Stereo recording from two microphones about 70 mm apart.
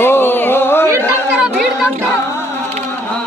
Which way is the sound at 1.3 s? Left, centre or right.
Centre.